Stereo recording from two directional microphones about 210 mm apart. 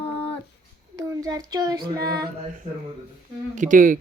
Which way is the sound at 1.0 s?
15° right (ahead or behind).